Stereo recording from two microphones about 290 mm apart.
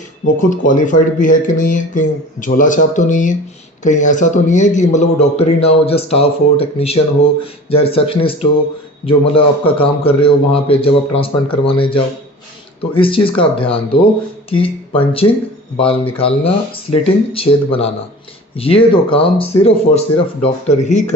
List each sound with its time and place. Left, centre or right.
0.3 s speech: left